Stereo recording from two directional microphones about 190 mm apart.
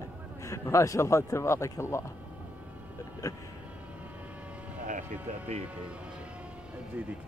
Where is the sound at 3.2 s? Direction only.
15° left (ahead or behind).